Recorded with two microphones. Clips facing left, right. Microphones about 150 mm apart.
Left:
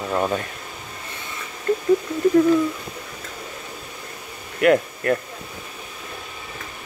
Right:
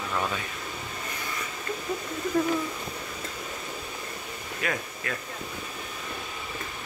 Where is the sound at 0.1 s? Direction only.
35° left (ahead or behind).